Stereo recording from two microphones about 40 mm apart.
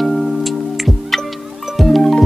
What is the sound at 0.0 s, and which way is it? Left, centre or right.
Music, centre.